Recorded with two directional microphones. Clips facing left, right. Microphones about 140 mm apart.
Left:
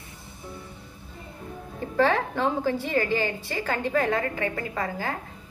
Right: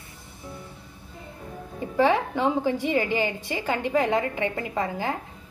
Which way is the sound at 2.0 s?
15° right (ahead or behind).